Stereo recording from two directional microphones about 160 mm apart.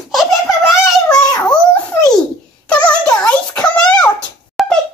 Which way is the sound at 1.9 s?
15° left (ahead or behind).